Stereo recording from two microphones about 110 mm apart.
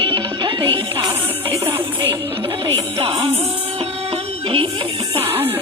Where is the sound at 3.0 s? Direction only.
55° right (ahead or behind).